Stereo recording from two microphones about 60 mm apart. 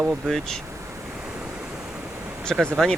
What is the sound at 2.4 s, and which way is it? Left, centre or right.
Speech, centre.